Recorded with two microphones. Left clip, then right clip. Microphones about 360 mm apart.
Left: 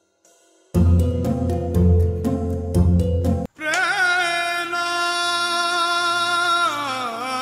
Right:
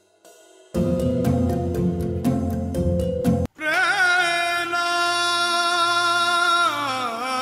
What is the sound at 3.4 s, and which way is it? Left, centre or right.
Music, centre.